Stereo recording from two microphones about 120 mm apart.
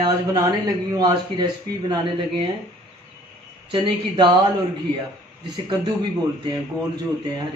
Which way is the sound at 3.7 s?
40° right (ahead or behind).